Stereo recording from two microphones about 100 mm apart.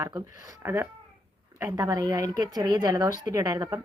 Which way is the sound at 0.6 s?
20° right (ahead or behind).